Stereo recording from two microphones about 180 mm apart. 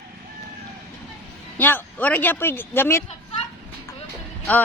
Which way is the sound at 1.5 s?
10° left (ahead or behind).